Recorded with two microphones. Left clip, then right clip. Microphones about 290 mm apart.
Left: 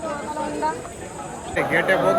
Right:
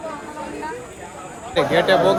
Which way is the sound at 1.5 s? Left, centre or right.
Centre.